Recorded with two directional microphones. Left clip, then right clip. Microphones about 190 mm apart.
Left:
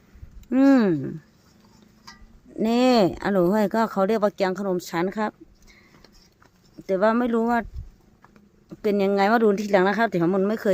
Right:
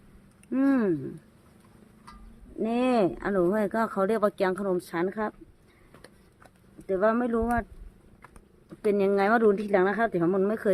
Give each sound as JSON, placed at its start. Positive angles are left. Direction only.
{"t": 0.5, "sound": "speech", "side_deg": 55}
{"t": 2.6, "sound": "speech", "side_deg": 50}
{"t": 6.8, "sound": "speech", "side_deg": 45}
{"t": 8.8, "sound": "speech", "side_deg": 35}